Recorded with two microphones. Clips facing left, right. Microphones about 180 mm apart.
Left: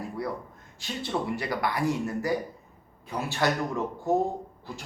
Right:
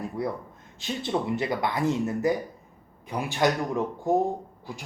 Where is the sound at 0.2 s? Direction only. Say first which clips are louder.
Right 3 dB; 20° right (ahead or behind).